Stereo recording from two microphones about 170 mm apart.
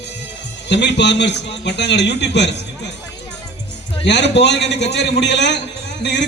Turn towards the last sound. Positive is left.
turn(degrees=90)